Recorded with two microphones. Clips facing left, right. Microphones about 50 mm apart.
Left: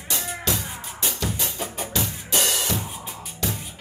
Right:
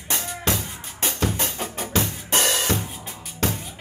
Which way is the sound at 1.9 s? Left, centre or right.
Right.